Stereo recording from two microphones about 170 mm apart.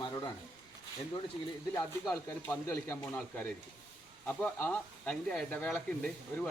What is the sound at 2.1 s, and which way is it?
Speech, 10° left (ahead or behind).